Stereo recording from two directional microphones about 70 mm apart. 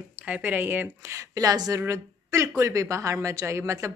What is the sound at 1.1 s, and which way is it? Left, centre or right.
Speech, right.